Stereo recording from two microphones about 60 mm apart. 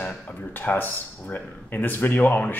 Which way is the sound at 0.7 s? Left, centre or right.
Left.